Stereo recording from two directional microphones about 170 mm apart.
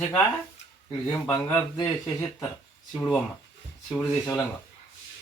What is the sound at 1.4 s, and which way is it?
Speech, 5° left (ahead or behind).